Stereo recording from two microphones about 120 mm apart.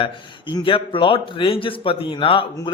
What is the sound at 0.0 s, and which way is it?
A man's voice, 45° left (ahead or behind).